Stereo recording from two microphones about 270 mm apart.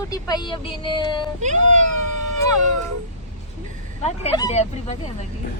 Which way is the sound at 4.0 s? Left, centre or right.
Centre.